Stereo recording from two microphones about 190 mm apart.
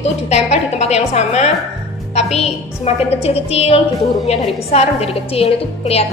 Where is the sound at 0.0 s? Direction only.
35° left (ahead or behind).